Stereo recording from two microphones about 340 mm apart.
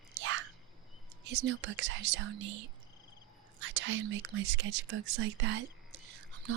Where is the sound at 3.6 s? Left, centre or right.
Right.